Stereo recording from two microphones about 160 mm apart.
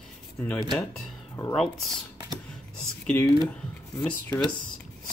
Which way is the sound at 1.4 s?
20° left (ahead or behind).